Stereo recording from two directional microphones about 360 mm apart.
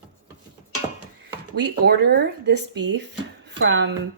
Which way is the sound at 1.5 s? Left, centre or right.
Right.